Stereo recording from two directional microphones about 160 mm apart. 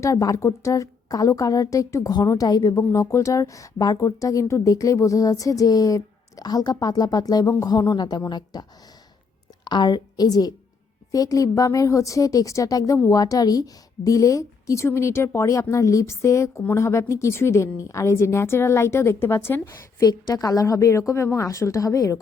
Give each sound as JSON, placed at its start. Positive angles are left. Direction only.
{"t": 0.0, "sound": "a woman's voice", "side_deg": 20}
{"t": 9.6, "sound": "a woman's voice", "side_deg": 25}